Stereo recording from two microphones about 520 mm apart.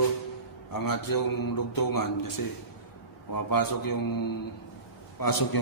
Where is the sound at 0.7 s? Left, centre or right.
Left.